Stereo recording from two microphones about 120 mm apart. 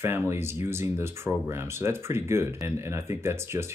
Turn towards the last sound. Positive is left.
turn(degrees=-20)  # may be behind; listen again after turning